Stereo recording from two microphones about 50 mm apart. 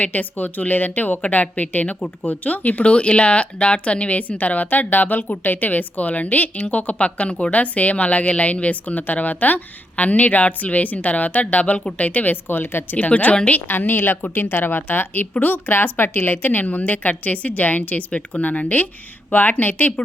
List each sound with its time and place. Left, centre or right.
0.0 s a woman's voice: left
13.0 s a woman's voice: left
13.7 s a woman's voice: left